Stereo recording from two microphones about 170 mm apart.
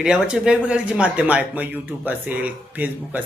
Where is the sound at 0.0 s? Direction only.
5° right (ahead or behind).